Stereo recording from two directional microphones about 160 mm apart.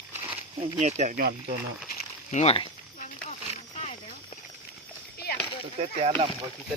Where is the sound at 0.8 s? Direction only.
45° right (ahead or behind).